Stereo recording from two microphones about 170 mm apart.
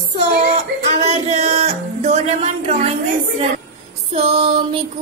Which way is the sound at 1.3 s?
40° right (ahead or behind).